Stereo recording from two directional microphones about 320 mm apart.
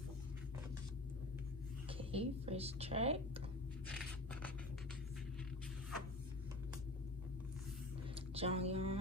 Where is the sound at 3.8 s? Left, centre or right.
Centre.